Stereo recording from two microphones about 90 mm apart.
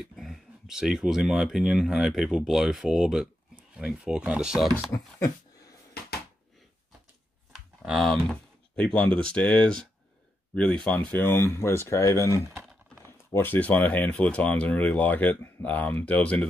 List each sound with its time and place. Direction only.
0.0 s speech: centre (ahead or behind)
7.5 s typing: 5° right (ahead or behind)
8.7 s speech: 10° left (ahead or behind); by 12.4 s 35° left (ahead or behind)
12.5 s typing: centre (ahead or behind)
13.0 s speech: 25° left (ahead or behind)